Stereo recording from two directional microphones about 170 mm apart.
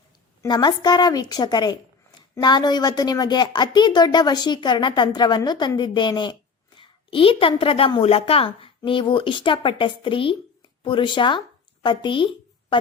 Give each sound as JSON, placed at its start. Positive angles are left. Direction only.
{"t": 0.4, "sound": "a woman's voice", "side_deg": 25}